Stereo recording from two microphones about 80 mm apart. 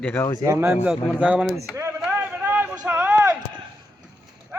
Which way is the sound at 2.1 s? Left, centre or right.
Right.